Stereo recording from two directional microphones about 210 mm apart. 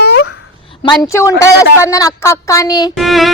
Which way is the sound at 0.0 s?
50° left (ahead or behind).